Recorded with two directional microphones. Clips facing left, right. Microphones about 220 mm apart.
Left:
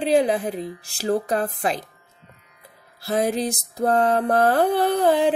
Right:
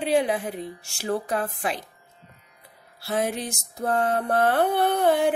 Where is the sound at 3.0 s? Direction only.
35° left (ahead or behind).